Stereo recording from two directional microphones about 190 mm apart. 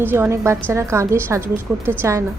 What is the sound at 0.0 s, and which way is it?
A woman's voice, 10° right (ahead or behind).